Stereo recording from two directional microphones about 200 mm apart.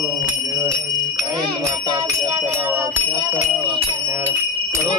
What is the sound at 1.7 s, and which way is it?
Bicycle bell, 20° right (ahead or behind).